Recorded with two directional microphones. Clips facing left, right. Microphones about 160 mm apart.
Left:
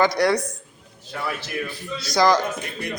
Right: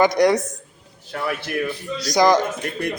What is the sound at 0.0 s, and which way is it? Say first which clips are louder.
Speech: right 3 dB; 20° right (ahead or behind).